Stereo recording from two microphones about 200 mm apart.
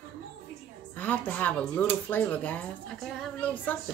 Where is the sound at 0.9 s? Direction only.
10° left (ahead or behind).